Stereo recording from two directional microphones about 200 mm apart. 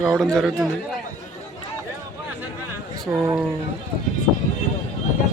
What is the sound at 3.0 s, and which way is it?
Speech, 10° right (ahead or behind).